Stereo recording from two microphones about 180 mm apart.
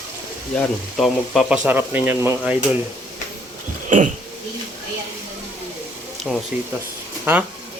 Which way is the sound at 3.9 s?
45° right (ahead or behind).